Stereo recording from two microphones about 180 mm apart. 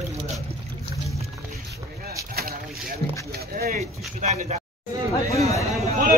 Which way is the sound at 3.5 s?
55° right (ahead or behind).